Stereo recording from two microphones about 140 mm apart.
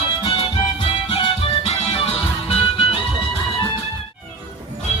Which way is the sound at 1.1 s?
45° left (ahead or behind).